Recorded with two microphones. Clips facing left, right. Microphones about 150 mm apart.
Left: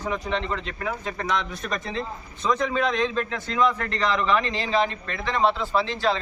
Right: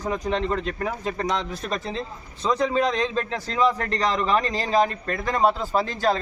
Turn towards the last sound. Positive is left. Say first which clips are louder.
# right 1 dB
turn(degrees=-45)  # may be behind; listen again after turning